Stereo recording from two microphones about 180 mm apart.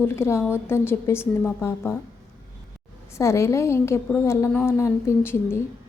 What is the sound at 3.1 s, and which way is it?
Speech, 15° left (ahead or behind).